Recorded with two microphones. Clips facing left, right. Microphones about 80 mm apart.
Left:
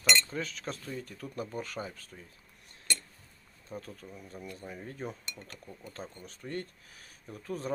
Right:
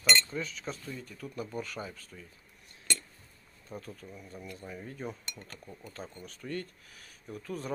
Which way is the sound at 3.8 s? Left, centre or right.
Left.